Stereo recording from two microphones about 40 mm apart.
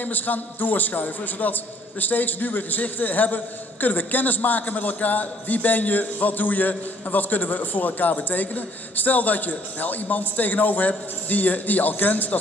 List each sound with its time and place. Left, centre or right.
0.0 s a man's voice: left